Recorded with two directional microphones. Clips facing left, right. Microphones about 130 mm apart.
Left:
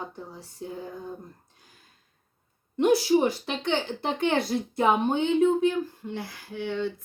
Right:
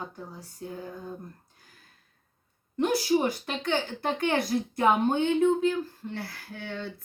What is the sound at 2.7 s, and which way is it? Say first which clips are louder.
A woman's voice: left 4 dB; 20° left (ahead or behind).